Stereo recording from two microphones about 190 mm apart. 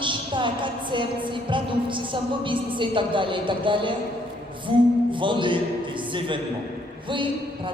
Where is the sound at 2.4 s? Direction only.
25° right (ahead or behind).